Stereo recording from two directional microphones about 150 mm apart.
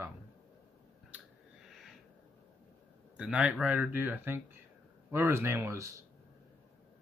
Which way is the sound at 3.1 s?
10° right (ahead or behind).